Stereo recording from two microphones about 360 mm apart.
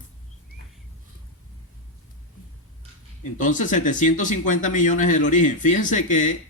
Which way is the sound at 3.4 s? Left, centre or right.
Left.